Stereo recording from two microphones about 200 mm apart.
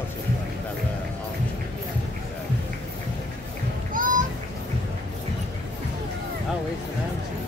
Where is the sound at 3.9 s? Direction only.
40° right (ahead or behind).